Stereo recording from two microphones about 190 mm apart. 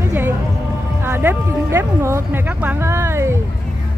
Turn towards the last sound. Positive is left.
turn(degrees=-15)  # may be behind; listen again after turning